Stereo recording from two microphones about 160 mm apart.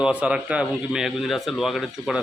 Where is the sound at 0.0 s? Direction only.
5° right (ahead or behind).